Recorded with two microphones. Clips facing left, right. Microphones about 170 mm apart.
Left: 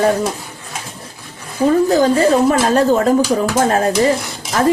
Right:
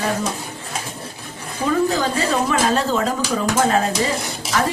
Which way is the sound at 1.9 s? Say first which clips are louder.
Left 8 dB; 45° left (ahead or behind).